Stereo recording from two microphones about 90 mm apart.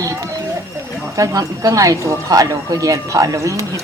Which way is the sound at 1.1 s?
40° right (ahead or behind).